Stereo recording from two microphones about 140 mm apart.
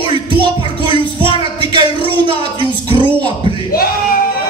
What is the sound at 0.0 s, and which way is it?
Music, 35° right (ahead or behind).